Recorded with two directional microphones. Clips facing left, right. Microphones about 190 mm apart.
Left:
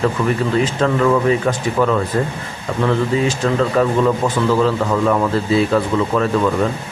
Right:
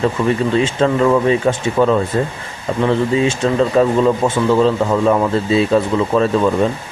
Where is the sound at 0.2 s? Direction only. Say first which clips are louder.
Right 2 dB; 30° right (ahead or behind).